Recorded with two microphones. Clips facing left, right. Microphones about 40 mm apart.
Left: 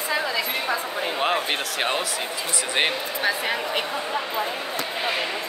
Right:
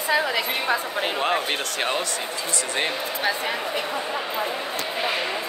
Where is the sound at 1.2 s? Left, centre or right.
Centre.